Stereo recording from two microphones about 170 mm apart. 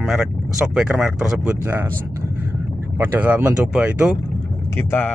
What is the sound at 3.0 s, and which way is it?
Speech, 10° right (ahead or behind).